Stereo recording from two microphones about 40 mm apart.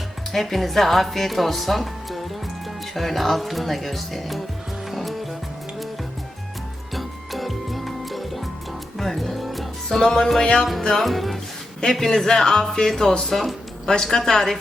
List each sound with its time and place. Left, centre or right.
0.3 s a woman's voice: centre
4.9 s music: centre
6.9 s music: centre
10.0 s speech: centre
10.4 s music: left
10.8 s music: centre
11.9 s speech: centre
13.2 s music: centre
13.8 s speech: centre